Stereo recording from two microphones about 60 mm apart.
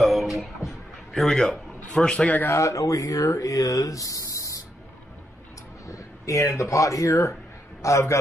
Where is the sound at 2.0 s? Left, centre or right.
Left.